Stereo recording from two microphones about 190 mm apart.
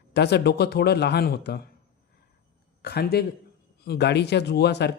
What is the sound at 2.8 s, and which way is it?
A man's voice, 60° left (ahead or behind).